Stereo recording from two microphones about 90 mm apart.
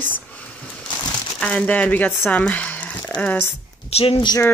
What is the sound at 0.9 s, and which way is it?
Crumpling, 55° left (ahead or behind).